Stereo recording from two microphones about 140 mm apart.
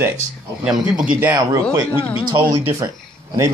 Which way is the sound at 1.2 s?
20° right (ahead or behind).